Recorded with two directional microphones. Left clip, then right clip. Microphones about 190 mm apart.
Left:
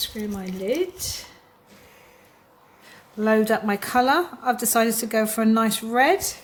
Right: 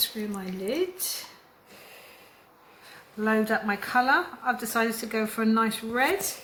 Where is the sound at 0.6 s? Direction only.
45° left (ahead or behind).